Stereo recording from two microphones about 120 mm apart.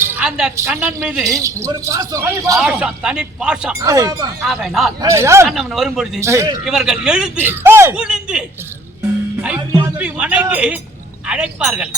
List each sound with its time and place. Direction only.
0.2 s a woman's voice: 5° right (ahead or behind)
1.2 s speech: 25° right (ahead or behind)
2.6 s speech: 5° right (ahead or behind)
3.8 s speech: 25° right (ahead or behind)
4.4 s speech: centre (ahead or behind)
4.9 s speech: 25° right (ahead or behind)
5.5 s speech: centre (ahead or behind)
6.1 s speech: 25° right (ahead or behind)
6.7 s speech: 5° right (ahead or behind)
7.4 s speech: 20° right (ahead or behind)
7.9 s speech: 5° right (ahead or behind)
10.0 s speech: 10° right (ahead or behind)